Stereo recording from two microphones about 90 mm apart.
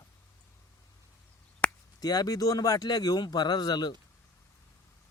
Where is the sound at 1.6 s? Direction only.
15° left (ahead or behind).